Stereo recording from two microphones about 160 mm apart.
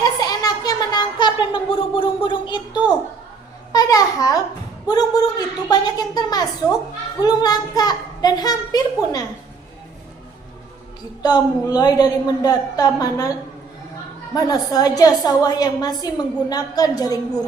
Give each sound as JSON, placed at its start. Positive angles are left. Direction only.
{"t": 0.0, "sound": "a sound", "side_deg": 25}
{"t": 3.7, "sound": "babbling", "side_deg": 25}
{"t": 4.9, "sound": "a woman's voice", "side_deg": 25}
{"t": 11.2, "sound": "a woman's voice", "side_deg": 25}
{"t": 14.3, "sound": "a woman's voice", "side_deg": 25}